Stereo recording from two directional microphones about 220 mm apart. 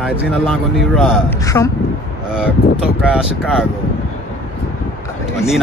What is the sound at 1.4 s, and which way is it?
Speech, 15° left (ahead or behind).